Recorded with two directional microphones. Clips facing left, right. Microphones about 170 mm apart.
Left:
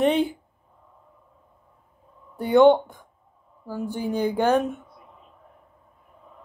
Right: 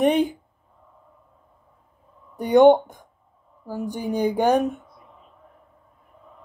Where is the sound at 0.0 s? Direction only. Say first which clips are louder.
Right 2 dB; 15° right (ahead or behind).